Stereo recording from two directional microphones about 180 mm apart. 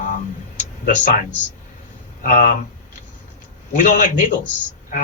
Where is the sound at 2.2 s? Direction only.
45° left (ahead or behind).